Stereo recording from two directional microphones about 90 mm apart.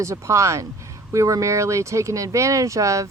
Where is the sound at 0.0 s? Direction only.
35° right (ahead or behind).